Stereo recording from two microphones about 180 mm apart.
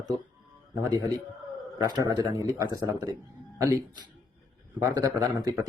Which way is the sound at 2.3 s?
20° right (ahead or behind).